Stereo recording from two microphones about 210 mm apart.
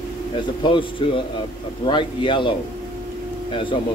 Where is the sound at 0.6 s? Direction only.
25° left (ahead or behind).